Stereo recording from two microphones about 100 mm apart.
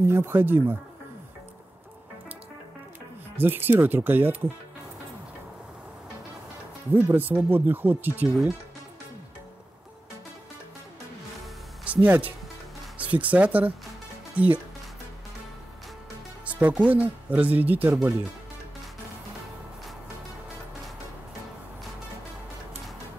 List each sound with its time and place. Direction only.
0.0 s speech: 25° right (ahead or behind)
3.3 s speech: 20° right (ahead or behind)
6.9 s speech: 20° right (ahead or behind)
11.8 s speech: 15° right (ahead or behind)
16.4 s speech: 15° right (ahead or behind)